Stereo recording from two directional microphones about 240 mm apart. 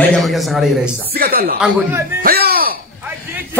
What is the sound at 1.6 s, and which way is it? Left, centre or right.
Speech, centre.